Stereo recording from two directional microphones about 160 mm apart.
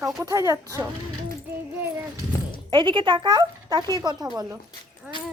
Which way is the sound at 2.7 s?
30° right (ahead or behind).